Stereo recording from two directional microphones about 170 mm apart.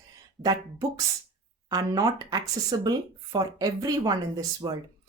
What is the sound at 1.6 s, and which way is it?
Speech, 20° right (ahead or behind).